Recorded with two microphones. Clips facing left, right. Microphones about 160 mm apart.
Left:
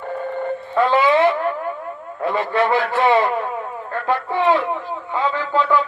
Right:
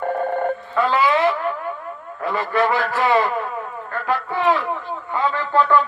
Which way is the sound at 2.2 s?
25° left (ahead or behind).